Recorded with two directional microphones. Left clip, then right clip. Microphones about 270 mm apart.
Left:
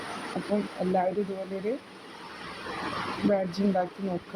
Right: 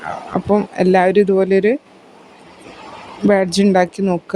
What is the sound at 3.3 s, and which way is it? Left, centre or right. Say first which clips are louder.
Speech: right 15 dB; right.